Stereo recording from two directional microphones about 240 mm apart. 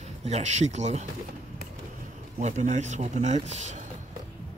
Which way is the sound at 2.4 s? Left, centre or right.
Right.